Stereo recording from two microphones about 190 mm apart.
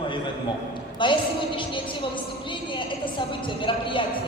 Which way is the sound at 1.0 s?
25° left (ahead or behind).